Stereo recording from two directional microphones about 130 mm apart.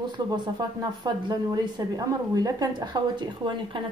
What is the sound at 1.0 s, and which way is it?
A woman's voice, 35° right (ahead or behind).